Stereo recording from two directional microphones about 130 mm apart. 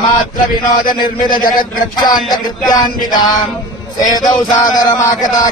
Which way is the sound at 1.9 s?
35° left (ahead or behind).